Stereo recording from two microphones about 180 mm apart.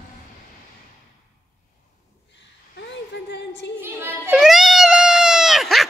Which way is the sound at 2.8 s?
85° left.